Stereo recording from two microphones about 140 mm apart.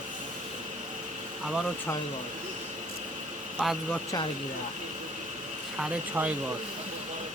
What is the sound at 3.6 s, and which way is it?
Speech, centre (ahead or behind).